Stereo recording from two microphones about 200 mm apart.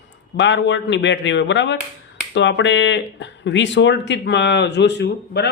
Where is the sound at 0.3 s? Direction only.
65° left (ahead or behind).